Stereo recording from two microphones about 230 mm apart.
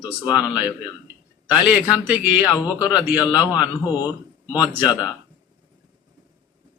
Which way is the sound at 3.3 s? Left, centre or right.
Centre.